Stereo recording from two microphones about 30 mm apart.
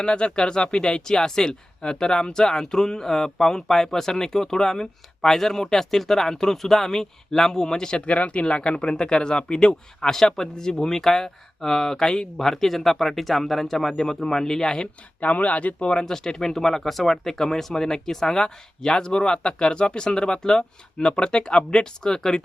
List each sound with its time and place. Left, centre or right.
0.0 s speech: left
8.1 s speech: left
15.2 s speech: left
15.8 s speech: left
16.0 s speech: centre